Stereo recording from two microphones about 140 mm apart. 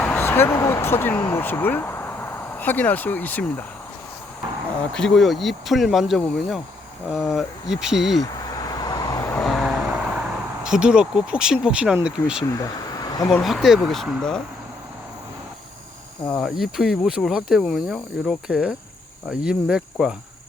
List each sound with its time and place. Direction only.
0.0 s speech: 15° left (ahead or behind)
4.9 s speech: 5° left (ahead or behind)
8.2 s vehicle: 30° left (ahead or behind)
9.4 s vehicle: centre (ahead or behind)
12.0 s speech: 5° right (ahead or behind)
12.5 s a sound: 25° left (ahead or behind)
13.3 s speech: centre (ahead or behind)
16.4 s speech: centre (ahead or behind)